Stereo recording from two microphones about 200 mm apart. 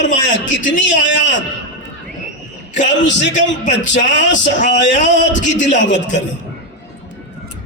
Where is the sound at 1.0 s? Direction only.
65° left (ahead or behind).